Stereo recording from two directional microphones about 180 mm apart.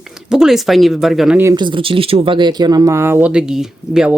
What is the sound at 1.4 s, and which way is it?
Speech, 25° right (ahead or behind).